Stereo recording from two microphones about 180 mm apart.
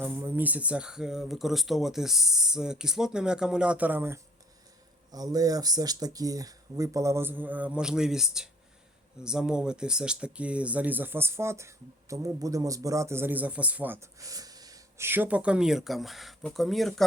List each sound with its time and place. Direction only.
0.0 s speech: 15° right (ahead or behind)